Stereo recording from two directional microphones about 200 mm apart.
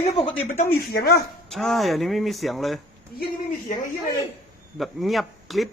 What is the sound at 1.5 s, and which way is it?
Speech, centre (ahead or behind).